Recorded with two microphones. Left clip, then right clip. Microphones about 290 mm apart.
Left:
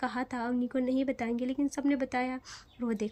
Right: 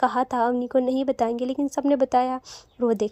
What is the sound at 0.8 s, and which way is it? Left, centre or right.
Speech, centre.